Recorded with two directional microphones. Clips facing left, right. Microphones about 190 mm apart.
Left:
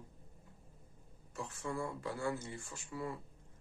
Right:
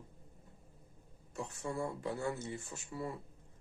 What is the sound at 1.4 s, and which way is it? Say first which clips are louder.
Speech: right 1 dB; 20° right (ahead or behind).